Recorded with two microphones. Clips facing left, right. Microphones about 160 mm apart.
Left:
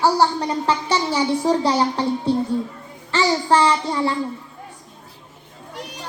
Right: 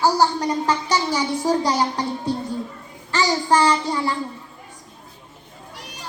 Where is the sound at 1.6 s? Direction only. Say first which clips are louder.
Left 3 dB; 30° left (ahead or behind).